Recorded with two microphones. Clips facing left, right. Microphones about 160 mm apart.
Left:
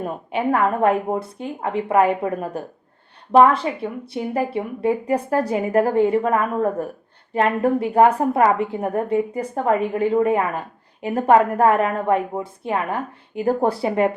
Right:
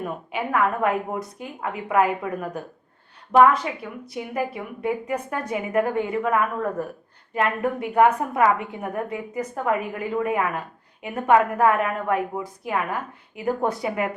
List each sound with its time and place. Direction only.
0.0 s a woman's voice: 30° left (ahead or behind)